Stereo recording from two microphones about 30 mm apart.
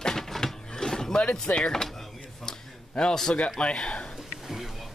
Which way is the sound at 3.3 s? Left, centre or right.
Left.